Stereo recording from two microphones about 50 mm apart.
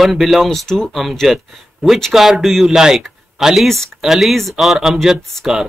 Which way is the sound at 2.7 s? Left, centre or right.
Centre.